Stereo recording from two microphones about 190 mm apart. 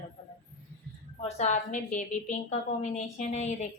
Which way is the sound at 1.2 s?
35° left (ahead or behind).